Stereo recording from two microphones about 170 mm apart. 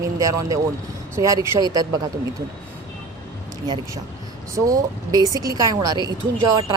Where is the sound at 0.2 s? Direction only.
20° right (ahead or behind).